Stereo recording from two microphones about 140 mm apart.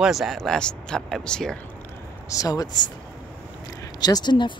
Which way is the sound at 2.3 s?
25° left (ahead or behind).